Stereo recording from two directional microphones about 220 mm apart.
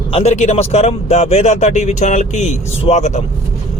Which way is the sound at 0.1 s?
30° left (ahead or behind).